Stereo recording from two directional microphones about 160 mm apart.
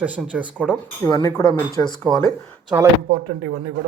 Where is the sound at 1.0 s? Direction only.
20° left (ahead or behind).